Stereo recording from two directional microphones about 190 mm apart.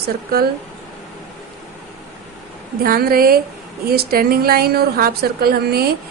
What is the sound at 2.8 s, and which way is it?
A woman's voice, 50° right (ahead or behind).